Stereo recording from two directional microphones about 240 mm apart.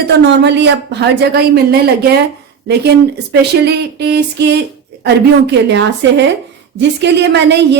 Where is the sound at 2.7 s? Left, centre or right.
Right.